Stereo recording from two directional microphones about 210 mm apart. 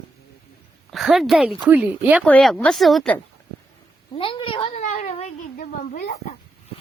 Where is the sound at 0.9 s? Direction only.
Centre (ahead or behind).